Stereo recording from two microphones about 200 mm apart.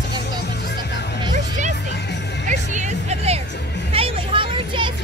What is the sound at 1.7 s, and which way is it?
Music, 60° left (ahead or behind).